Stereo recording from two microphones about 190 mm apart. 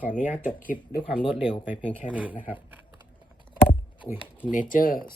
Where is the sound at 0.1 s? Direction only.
40° left (ahead or behind).